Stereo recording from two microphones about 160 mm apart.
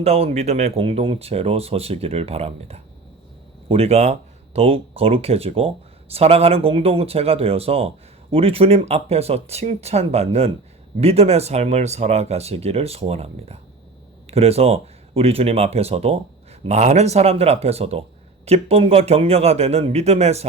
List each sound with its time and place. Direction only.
0.0 s speech: 40° right (ahead or behind)